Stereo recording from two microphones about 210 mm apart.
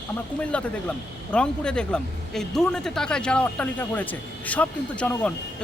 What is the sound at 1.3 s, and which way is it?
A man's voice, 5° left (ahead or behind).